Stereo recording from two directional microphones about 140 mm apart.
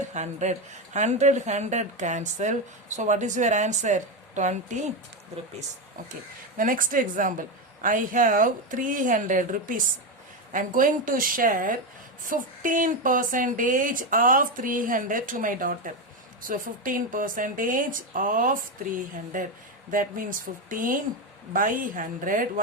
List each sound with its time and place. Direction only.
0.1 s a woman's voice: 55° right (ahead or behind)
6.6 s speech: 75° right (ahead or behind)